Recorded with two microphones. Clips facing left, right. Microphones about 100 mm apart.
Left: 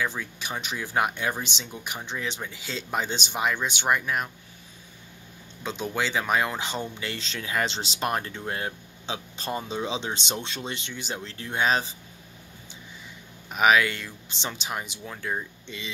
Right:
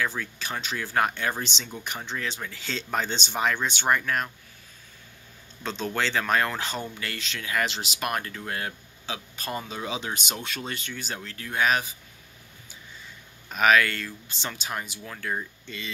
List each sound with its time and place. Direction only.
0.0 s speech: 15° left (ahead or behind)
2.6 s speech: 10° left (ahead or behind)
5.6 s speech: 15° left (ahead or behind)
13.5 s speech: 15° left (ahead or behind)